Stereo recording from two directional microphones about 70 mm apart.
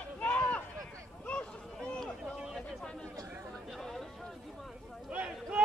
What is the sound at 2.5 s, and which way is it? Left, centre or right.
Chatter, centre.